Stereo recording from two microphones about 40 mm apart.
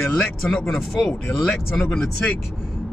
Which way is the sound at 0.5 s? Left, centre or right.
Centre.